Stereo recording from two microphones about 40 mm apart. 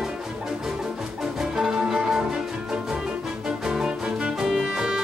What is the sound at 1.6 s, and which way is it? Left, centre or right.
Music, centre.